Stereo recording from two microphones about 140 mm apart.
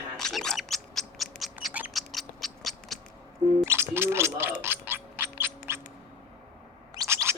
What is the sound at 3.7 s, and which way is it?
Gargling, 15° right (ahead or behind).